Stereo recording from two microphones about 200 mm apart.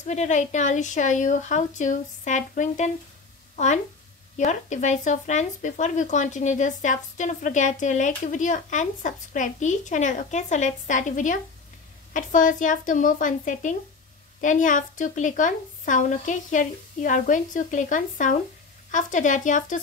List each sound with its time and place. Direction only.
0.0 s speech: 35° left (ahead or behind)